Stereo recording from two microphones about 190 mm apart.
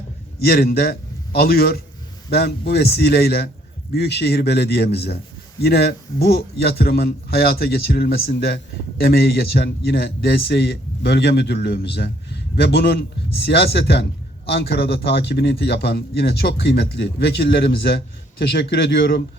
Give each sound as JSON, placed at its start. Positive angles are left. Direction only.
{"t": 0.4, "sound": "a man's voice", "side_deg": 55}